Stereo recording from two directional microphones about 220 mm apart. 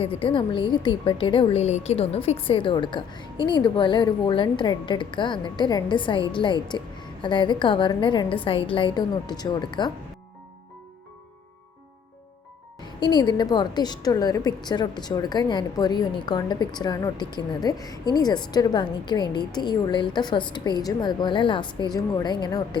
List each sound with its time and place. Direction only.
0.0 s a woman's voice: 25° left (ahead or behind)
13.0 s a woman's voice: 20° left (ahead or behind)